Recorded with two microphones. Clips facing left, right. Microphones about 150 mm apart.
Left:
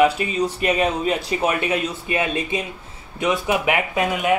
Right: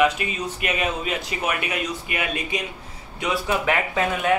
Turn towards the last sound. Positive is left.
turn(degrees=15)  # may be behind; listen again after turning